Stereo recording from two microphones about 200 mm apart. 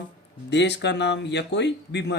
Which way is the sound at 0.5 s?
60° left (ahead or behind).